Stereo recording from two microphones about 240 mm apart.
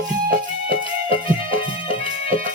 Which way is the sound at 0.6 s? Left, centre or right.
Left.